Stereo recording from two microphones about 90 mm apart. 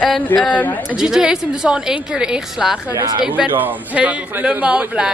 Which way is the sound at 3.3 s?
20° right (ahead or behind).